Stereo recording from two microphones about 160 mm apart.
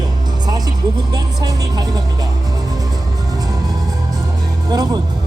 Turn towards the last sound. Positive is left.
turn(degrees=-25)  # may be behind; listen again after turning